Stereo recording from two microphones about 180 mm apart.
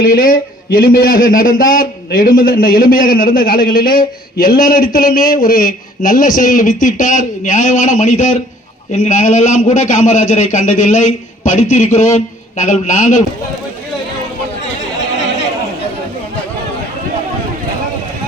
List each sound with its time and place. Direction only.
0.0 s a man's voice: 55° left (ahead or behind)